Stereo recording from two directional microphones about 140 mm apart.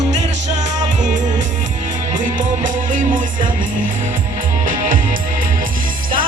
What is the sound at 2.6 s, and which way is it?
Music, 70° right (ahead or behind).